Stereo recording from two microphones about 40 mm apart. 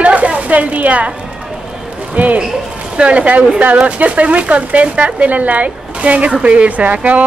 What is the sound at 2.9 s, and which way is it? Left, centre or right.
Speech, right.